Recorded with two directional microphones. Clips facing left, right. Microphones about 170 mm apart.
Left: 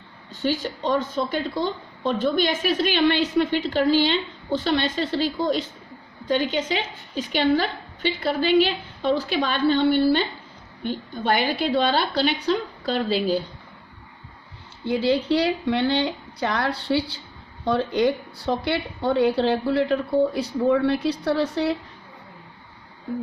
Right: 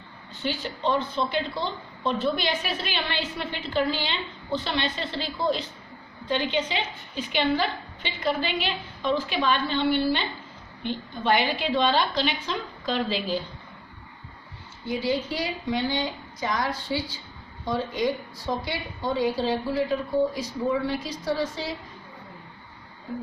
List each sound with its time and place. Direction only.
0.4 s a woman's voice: 40° left (ahead or behind)
14.8 s a woman's voice: 70° left (ahead or behind)